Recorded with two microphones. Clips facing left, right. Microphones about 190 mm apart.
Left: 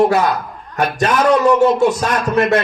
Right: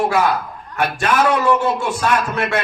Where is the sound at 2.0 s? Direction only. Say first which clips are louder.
Left 3 dB; 40° left (ahead or behind).